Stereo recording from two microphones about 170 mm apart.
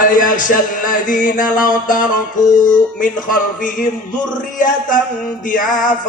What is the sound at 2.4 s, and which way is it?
Music, 25° left (ahead or behind).